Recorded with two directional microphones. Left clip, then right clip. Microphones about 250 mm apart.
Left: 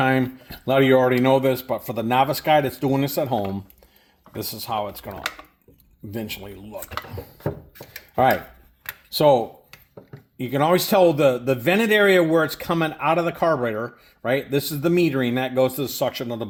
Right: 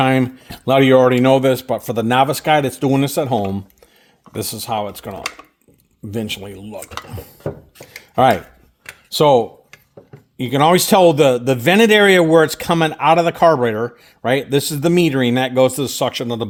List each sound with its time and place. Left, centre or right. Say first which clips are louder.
0.0 s a man's voice: right 5 dB; right
8.1 s a man's voice: right 5 dB; right